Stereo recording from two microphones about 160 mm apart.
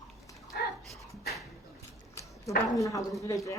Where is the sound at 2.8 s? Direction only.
20° left (ahead or behind).